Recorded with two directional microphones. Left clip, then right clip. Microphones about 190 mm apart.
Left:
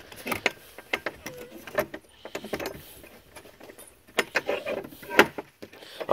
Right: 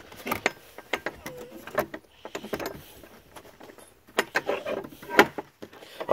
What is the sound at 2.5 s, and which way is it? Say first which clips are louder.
Vehicle: even; 30° right (ahead or behind).